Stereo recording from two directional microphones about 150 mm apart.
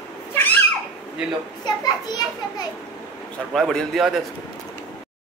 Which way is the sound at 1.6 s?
25° left (ahead or behind).